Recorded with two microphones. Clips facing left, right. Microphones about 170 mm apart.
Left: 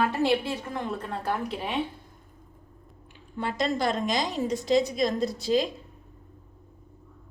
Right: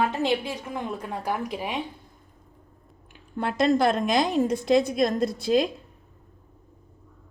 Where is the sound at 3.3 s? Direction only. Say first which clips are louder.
Right 6 dB; 55° right (ahead or behind).